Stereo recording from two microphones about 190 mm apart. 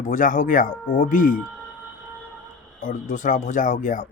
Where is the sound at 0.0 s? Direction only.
45° left (ahead or behind).